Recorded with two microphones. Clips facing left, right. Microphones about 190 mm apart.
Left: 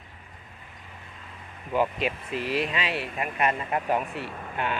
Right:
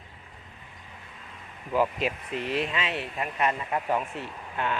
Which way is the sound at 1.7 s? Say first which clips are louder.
Even; centre (ahead or behind).